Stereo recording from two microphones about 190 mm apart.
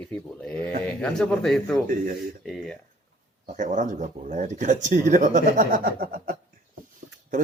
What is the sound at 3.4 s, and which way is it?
Speech, 40° right (ahead or behind).